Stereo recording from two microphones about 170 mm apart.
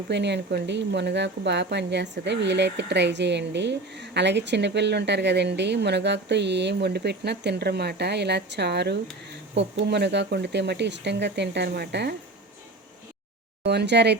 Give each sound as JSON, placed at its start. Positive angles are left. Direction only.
{"t": 0.1, "sound": "speech", "side_deg": -90}
{"t": 13.7, "sound": "speech", "side_deg": -85}